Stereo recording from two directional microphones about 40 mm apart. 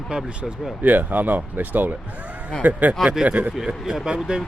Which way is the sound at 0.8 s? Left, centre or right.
Right.